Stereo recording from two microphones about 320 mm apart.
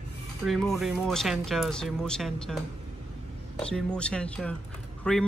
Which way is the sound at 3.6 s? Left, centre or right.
Centre.